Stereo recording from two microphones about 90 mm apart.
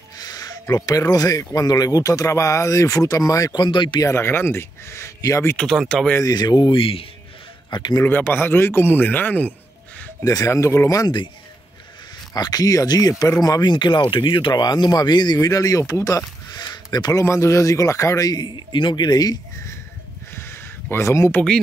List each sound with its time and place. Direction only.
0.2 s speech: 45° left (ahead or behind)
3.5 s speech: 55° left (ahead or behind)
4.1 s a man's voice: 25° left (ahead or behind)
5.6 s speech: 5° left (ahead or behind)
6.2 s speech: 50° left (ahead or behind); by 7.1 s 90° left
7.7 s speech: 55° left (ahead or behind)
8.0 s a man's voice: 20° left (ahead or behind)
10.2 s speech: 40° left (ahead or behind)
12.4 s speech: 45° left (ahead or behind)
15.3 s speech: 40° left (ahead or behind)
15.9 s a sound: 40° left (ahead or behind)
17.1 s speech: 30° left (ahead or behind); by 19.3 s 50° left (ahead or behind)
20.9 s speech: 30° left (ahead or behind)